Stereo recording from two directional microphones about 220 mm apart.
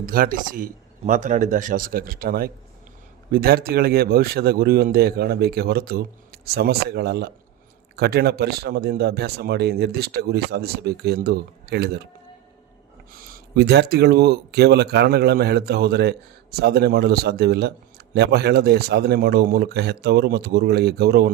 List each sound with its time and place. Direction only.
0.0 s a man's voice: 40° right (ahead or behind)
13.1 s speech: 45° right (ahead or behind)